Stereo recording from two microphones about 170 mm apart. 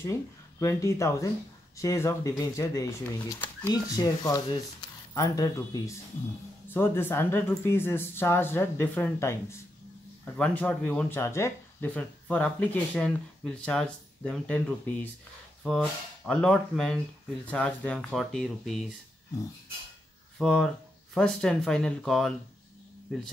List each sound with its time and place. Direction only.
0.6 s speech: 15° left (ahead or behind)
20.3 s speech: centre (ahead or behind)